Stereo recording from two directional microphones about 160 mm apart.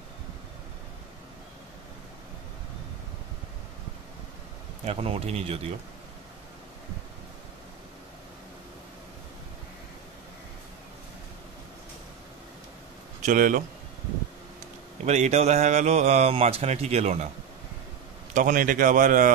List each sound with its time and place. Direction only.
4.8 s speech: 40° right (ahead or behind)
13.2 s a man's voice: 55° right (ahead or behind)
15.0 s speech: 45° right (ahead or behind)
18.3 s a man's voice: 55° right (ahead or behind)